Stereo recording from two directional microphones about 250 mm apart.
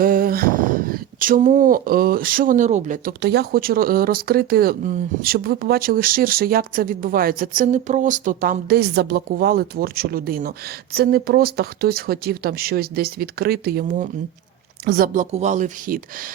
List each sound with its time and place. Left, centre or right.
0.0 s speech: right